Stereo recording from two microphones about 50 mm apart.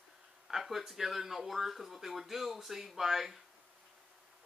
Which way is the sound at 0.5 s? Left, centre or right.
Centre.